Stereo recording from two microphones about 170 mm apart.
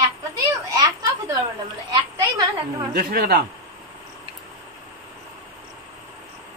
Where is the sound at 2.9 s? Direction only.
65° right (ahead or behind).